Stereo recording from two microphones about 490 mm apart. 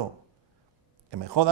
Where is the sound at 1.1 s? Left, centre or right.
Right.